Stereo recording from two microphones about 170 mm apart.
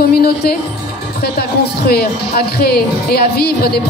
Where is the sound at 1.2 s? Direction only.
70° left (ahead or behind).